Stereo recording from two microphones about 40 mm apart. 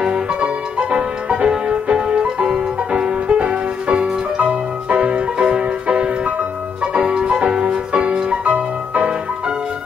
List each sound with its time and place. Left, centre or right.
0.0 s music: centre
8.5 s music: right